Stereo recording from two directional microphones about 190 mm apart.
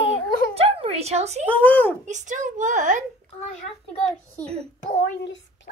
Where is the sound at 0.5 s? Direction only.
30° right (ahead or behind).